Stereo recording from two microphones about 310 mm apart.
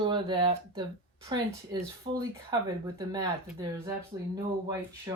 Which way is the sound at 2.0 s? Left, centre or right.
Centre.